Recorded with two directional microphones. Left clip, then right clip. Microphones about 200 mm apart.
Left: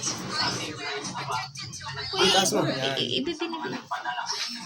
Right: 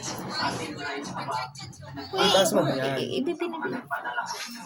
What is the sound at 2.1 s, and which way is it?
Speech, 55° right (ahead or behind).